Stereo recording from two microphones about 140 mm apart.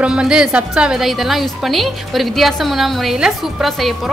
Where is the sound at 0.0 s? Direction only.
5° right (ahead or behind).